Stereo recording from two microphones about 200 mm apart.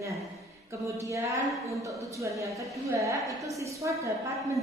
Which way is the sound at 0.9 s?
15° right (ahead or behind).